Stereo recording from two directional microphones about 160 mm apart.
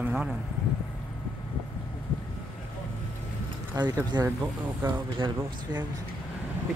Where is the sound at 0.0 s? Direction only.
5° right (ahead or behind).